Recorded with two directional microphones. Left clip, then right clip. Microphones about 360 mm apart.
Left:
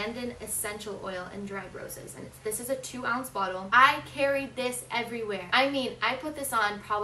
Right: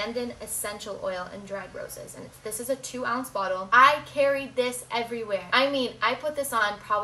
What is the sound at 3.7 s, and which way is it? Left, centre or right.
A woman's voice, centre.